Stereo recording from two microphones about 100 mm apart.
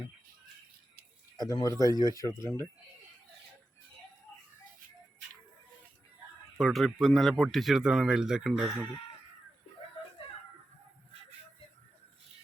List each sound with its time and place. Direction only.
1.4 s speech: 40° left (ahead or behind)
6.6 s speech: centre (ahead or behind)